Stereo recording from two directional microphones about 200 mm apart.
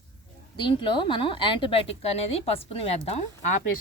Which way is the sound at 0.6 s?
25° left (ahead or behind).